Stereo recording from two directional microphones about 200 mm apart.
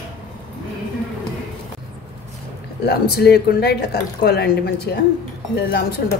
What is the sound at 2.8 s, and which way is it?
A woman's voice, 55° left (ahead or behind).